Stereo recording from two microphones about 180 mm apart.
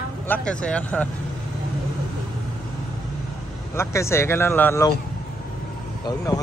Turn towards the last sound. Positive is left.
turn(degrees=20)  # may be behind; listen again after turning